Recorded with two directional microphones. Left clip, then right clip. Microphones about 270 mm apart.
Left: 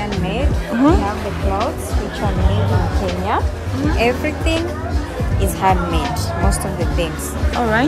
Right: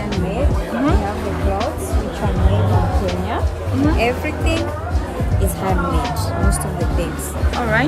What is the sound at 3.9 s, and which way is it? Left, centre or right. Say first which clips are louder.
Speech: left 2 dB; left.